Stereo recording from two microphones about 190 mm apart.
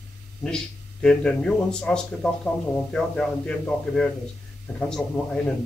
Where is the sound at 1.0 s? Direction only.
5° left (ahead or behind).